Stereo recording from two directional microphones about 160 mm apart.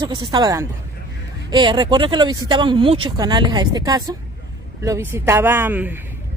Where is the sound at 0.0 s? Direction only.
25° right (ahead or behind).